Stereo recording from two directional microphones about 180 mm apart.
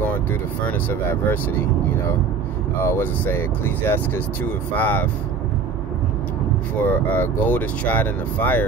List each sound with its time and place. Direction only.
0.0 s speech: 10° left (ahead or behind)
2.8 s speech: 10° left (ahead or behind)
6.8 s speech: 10° left (ahead or behind)